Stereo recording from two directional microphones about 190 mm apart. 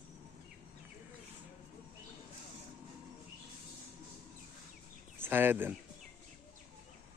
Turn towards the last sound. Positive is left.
turn(degrees=-10)  # may be behind; listen again after turning